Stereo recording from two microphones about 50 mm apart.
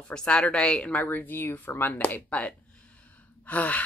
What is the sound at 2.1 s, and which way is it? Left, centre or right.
Gasp, left.